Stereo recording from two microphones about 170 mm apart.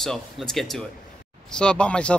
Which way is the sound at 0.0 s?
Centre (ahead or behind).